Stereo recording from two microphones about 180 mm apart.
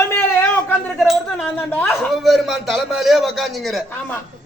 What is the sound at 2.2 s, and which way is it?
A man's voice, centre (ahead or behind).